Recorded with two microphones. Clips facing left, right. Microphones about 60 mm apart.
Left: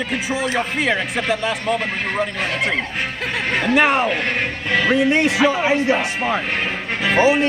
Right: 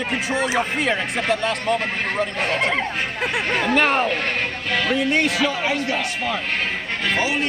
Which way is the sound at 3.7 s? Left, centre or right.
Centre.